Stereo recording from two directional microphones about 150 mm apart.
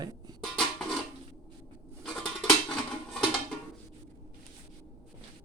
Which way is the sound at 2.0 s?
5° left (ahead or behind).